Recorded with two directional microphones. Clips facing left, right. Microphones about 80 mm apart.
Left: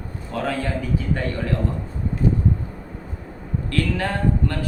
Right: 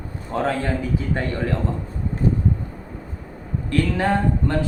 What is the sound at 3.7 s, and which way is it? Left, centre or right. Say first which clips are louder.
Speech: right 4 dB; right.